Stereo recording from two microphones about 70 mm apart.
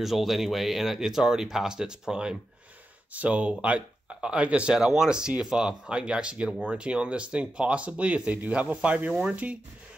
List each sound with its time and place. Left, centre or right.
0.0 s speech: centre